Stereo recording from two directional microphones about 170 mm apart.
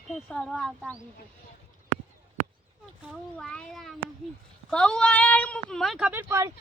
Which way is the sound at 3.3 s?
5° left (ahead or behind).